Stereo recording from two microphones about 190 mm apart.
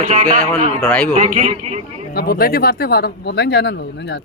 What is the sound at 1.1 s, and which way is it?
Speech, 40° right (ahead or behind).